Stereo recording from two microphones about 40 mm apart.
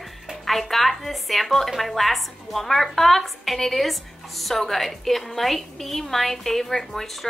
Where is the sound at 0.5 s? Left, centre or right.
Centre.